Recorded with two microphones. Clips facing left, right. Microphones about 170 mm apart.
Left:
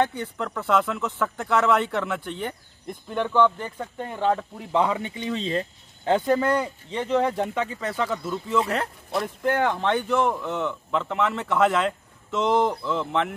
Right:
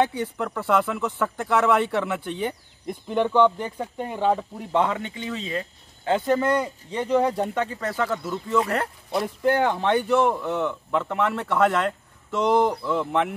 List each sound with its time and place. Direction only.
0.0 s speech: 10° right (ahead or behind)
4.7 s speech: 10° left (ahead or behind)
6.0 s speech: centre (ahead or behind)
6.6 s speech: 10° right (ahead or behind)
7.4 s speech: centre (ahead or behind)